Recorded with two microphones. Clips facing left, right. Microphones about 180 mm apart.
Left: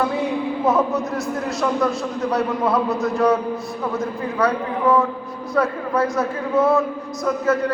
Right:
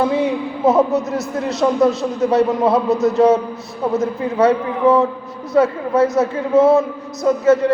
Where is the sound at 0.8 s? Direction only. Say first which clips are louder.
Right 5 dB; 20° right (ahead or behind).